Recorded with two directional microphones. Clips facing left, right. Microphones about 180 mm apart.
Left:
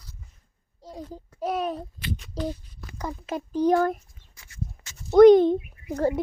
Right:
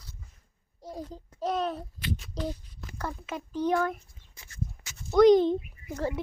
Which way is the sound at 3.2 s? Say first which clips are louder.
Left 7 dB; 40° left (ahead or behind).